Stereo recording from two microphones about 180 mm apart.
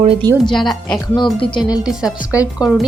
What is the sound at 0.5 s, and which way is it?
Speech, centre (ahead or behind).